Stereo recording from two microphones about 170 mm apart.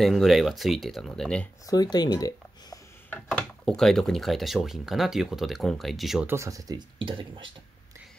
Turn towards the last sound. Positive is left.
turn(degrees=-30)  # may be behind; listen again after turning